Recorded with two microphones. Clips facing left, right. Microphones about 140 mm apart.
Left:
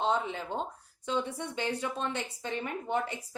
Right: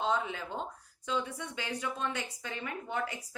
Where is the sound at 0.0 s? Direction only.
25° left (ahead or behind).